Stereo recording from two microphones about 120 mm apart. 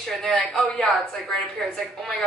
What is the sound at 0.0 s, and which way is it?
A woman's voice, 5° left (ahead or behind).